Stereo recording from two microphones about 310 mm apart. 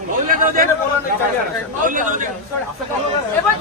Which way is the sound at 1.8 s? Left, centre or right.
Right.